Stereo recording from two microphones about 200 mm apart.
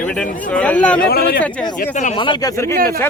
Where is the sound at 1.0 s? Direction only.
50° left (ahead or behind).